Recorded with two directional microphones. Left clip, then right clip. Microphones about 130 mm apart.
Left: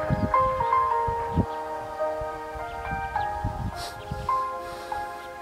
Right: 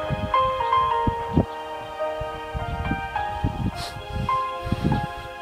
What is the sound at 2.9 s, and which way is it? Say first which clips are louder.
Music: even; 35° right (ahead or behind).